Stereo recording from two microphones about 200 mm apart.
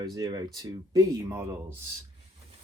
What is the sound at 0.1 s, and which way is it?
Speech, 20° right (ahead or behind).